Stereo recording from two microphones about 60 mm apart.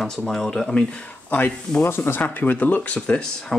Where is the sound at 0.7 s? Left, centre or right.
Centre.